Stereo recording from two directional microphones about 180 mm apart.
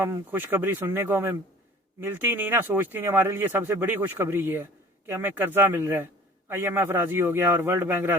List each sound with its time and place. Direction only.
0.0 s speech: 10° right (ahead or behind)